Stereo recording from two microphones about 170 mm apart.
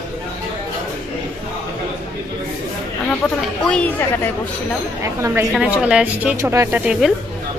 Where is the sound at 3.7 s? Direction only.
10° left (ahead or behind).